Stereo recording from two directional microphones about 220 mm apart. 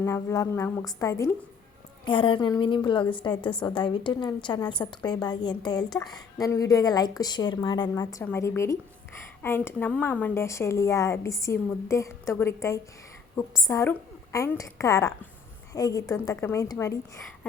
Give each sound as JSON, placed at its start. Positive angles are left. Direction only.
{"t": 0.0, "sound": "a woman's voice", "side_deg": 10}